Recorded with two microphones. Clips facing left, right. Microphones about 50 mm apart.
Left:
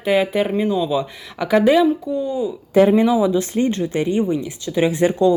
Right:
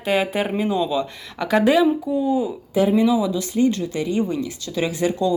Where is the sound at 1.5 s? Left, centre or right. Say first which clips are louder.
Left 2 dB; centre.